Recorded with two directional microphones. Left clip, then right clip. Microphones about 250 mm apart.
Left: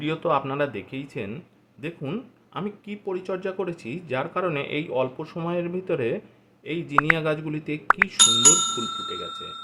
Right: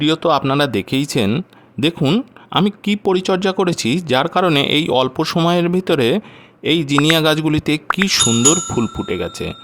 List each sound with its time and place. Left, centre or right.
0.0 s speech: right
8.2 s speech: centre
9.0 s speech: right